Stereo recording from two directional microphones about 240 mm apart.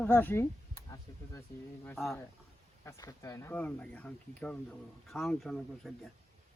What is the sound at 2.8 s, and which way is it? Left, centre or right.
Speech, centre.